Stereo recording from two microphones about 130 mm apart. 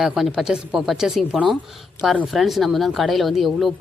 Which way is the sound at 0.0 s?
Centre (ahead or behind).